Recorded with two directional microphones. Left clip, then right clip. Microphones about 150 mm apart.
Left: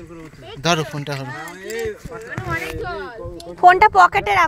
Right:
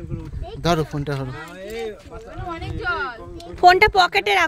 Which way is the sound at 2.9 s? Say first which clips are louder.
Right 4 dB; 5° right (ahead or behind).